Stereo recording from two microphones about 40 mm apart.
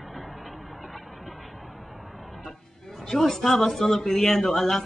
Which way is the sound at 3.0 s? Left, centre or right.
Centre.